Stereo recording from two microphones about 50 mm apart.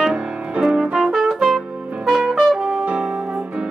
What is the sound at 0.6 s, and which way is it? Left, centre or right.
Brass instrument, centre.